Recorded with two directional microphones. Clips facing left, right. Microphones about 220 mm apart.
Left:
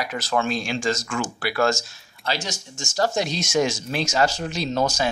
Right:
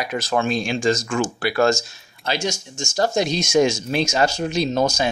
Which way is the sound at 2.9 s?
20° right (ahead or behind).